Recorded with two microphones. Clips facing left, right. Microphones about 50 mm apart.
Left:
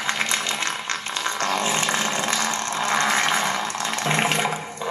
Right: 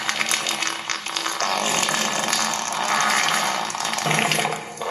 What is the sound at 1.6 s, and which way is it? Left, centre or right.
Ratchet, centre.